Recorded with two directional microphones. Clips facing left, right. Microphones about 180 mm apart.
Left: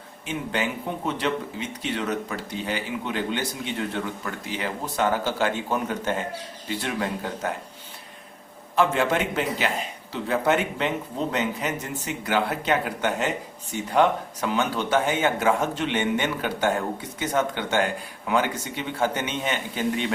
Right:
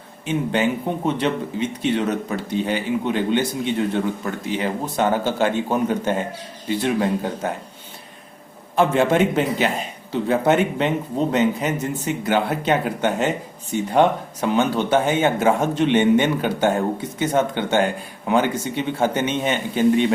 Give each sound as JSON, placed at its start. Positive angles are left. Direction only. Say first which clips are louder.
{"t": 0.3, "sound": "speech", "louder": "right 7 dB", "side_deg": -20}
{"t": 8.7, "sound": "speech", "louder": "right 5 dB", "side_deg": -25}